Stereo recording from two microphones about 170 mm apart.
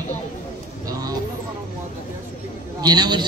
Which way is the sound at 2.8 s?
25° right (ahead or behind).